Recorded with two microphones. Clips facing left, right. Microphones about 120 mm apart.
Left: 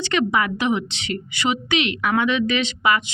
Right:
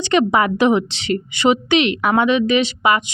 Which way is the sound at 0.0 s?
20° right (ahead or behind).